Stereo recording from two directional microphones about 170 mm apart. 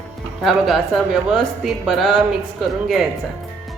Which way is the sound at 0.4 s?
Centre (ahead or behind).